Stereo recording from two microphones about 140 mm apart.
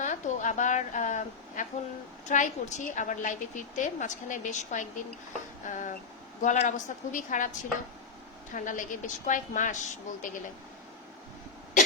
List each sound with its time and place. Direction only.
0.0 s a woman's voice: 60° left (ahead or behind)
8.5 s a woman's voice: 70° left (ahead or behind)